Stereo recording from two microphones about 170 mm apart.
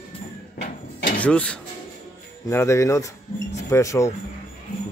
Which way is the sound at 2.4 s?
15° left (ahead or behind).